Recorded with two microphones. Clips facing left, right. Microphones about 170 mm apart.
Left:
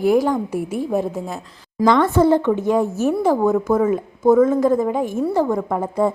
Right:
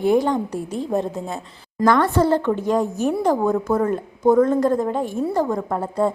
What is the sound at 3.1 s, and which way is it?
A woman's voice, 5° left (ahead or behind).